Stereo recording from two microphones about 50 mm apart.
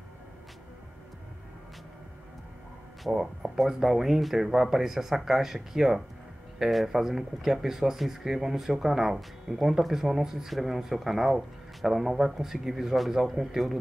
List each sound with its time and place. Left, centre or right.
3.1 s speech: centre
3.5 s speech: centre